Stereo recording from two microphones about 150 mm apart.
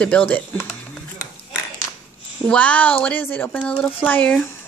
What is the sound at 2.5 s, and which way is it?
A woman's voice, 10° left (ahead or behind).